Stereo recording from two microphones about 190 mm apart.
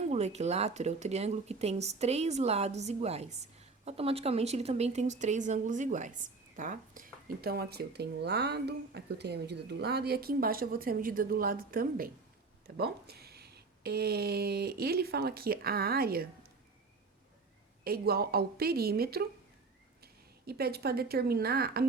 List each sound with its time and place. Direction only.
0.1 s speech: 35° right (ahead or behind); by 16.5 s 55° right (ahead or behind)
17.8 s a woman's voice: 55° right (ahead or behind)
20.5 s speech: 55° right (ahead or behind)